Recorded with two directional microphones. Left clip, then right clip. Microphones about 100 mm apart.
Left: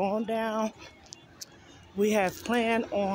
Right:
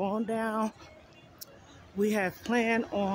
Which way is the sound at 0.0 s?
25° right (ahead or behind).